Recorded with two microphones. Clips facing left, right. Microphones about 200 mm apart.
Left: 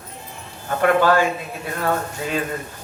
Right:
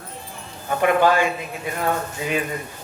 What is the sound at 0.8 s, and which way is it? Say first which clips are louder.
A man's voice: left 1 dB; 15° right (ahead or behind).